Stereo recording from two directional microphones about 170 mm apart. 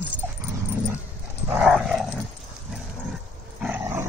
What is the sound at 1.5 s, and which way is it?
Dog, 5° right (ahead or behind).